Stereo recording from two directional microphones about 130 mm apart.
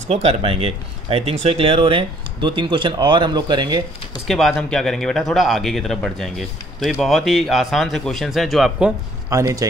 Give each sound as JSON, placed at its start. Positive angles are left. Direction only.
{"t": 0.1, "sound": "speech", "side_deg": -50}
{"t": 4.3, "sound": "a man's voice", "side_deg": 0}
{"t": 9.3, "sound": "speech", "side_deg": -25}